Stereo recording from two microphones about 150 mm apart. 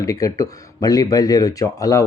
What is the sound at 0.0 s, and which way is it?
Speech, 20° left (ahead or behind).